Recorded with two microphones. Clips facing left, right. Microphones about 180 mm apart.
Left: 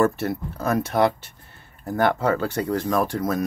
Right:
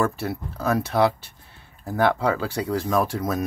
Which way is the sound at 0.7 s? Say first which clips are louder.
Even; centre (ahead or behind).